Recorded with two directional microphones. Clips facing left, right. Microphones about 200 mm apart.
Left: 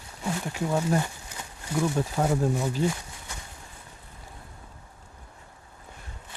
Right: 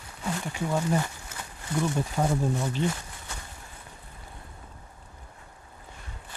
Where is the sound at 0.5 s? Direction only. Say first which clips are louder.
Left 1 dB; 10° left (ahead or behind).